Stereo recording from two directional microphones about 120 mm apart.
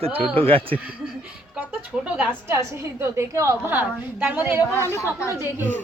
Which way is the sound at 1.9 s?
5° right (ahead or behind).